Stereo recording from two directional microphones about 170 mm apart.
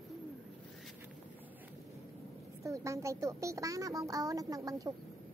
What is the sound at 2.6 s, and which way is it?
A woman's voice, 15° right (ahead or behind).